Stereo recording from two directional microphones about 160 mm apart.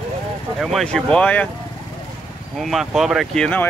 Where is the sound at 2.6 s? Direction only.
Centre (ahead or behind).